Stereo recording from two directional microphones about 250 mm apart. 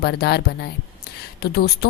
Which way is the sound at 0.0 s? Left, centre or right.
Left.